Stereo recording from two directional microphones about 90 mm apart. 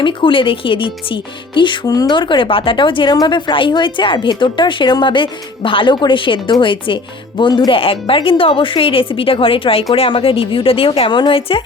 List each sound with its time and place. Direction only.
0.0 s speech: 70° left (ahead or behind)
3.2 s a woman's voice: 55° left (ahead or behind)
7.8 s speech: 90° left